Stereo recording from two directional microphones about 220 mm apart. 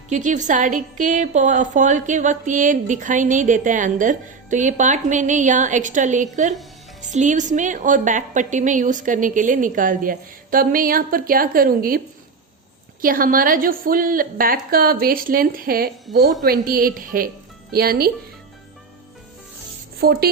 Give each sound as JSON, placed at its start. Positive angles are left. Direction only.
{"t": 0.1, "sound": "a woman's voice", "side_deg": -35}
{"t": 16.1, "sound": "a woman's voice", "side_deg": 0}
{"t": 16.4, "sound": "a woman's voice", "side_deg": -40}
{"t": 20.0, "sound": "rub", "side_deg": -45}